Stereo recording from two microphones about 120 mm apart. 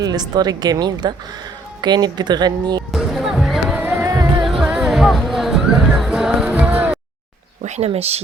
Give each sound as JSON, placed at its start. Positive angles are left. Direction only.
{"t": 0.0, "sound": "a woman's voice", "side_deg": -35}
{"t": 2.9, "sound": "music", "side_deg": 0}
{"t": 4.0, "sound": "music", "side_deg": -25}
{"t": 4.4, "sound": "music", "side_deg": -5}
{"t": 7.6, "sound": "a sound", "side_deg": -65}
{"t": 7.9, "sound": "speech", "side_deg": -60}